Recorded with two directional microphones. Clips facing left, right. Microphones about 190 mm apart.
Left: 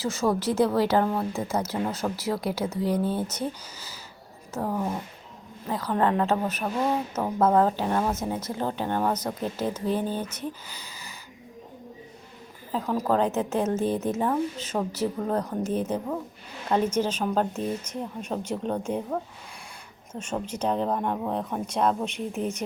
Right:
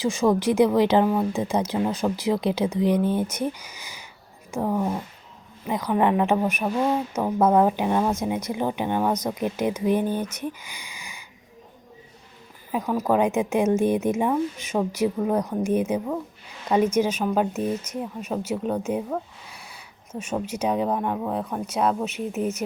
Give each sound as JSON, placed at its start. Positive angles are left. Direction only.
{"t": 0.0, "sound": "a woman's voice", "side_deg": -15}
{"t": 10.4, "sound": "a sound", "side_deg": -15}
{"t": 12.7, "sound": "a woman's voice", "side_deg": -10}